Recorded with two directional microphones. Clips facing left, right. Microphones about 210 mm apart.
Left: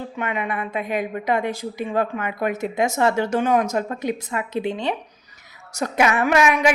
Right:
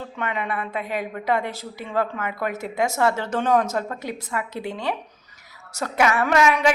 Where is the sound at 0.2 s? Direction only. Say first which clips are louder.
Left 1 dB; 15° left (ahead or behind).